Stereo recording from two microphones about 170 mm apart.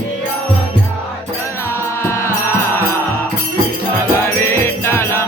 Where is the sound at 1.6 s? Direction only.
15° left (ahead or behind).